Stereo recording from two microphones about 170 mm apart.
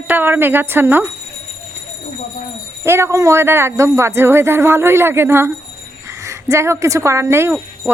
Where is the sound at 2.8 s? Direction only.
15° right (ahead or behind).